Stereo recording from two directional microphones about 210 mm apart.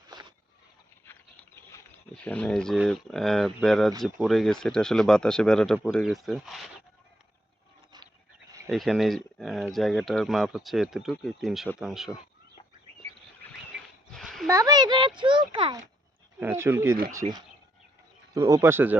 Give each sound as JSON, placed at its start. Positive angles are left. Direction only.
{"t": 0.1, "sound": "vehicle", "side_deg": -20}
{"t": 2.1, "sound": "speech", "side_deg": 5}
{"t": 8.7, "sound": "speech", "side_deg": 0}
{"t": 13.7, "sound": "a sound", "side_deg": 0}
{"t": 14.4, "sound": "a child's voice", "side_deg": -15}
{"t": 16.4, "sound": "speech", "side_deg": -10}
{"t": 18.3, "sound": "speech", "side_deg": -15}